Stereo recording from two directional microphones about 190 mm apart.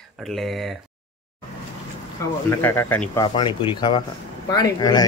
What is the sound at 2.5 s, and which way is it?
Speech, 15° left (ahead or behind).